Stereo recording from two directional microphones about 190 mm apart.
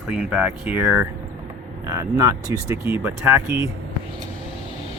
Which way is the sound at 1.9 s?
20° right (ahead or behind).